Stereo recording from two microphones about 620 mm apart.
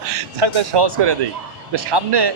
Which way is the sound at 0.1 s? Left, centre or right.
Right.